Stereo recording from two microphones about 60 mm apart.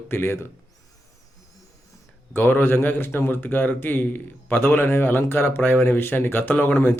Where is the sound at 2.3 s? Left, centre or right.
Left.